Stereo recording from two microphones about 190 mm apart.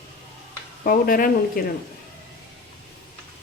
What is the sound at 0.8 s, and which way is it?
Speech, 50° left (ahead or behind).